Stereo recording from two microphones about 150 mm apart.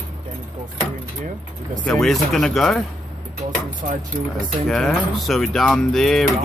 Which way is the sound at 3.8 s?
60° right (ahead or behind).